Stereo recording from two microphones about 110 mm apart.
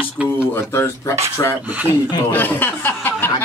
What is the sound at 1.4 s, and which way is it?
Speech, 35° left (ahead or behind).